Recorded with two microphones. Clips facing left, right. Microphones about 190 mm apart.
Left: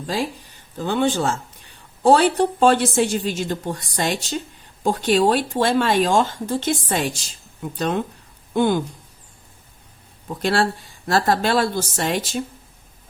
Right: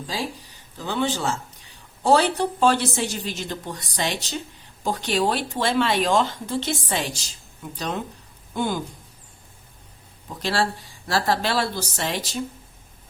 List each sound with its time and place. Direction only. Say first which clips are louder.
0.8 s speech: left 5 dB; 50° left (ahead or behind)
10.4 s speech: left 4 dB; 55° left (ahead or behind)